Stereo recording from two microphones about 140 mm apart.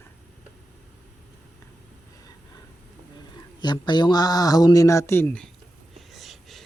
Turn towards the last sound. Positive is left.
turn(degrees=0)  # may be behind; listen again after turning